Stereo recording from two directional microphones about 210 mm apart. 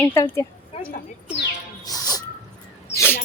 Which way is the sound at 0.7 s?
25° left (ahead or behind).